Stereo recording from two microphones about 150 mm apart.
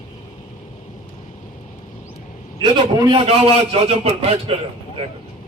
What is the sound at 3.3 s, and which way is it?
A man's voice, 40° right (ahead or behind).